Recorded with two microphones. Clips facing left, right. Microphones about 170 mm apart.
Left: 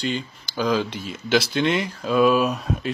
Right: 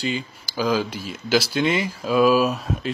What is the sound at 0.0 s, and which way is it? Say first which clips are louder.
Speech: even; centre (ahead or behind).